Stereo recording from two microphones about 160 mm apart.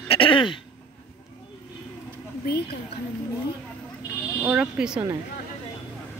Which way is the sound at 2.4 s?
80° left.